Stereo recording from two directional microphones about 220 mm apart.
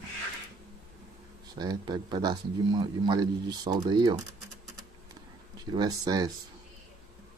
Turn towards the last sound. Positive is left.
turn(degrees=-15)  # may be behind; listen again after turning